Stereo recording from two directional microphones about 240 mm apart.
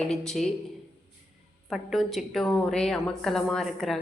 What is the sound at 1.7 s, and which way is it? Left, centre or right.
A woman's voice, centre.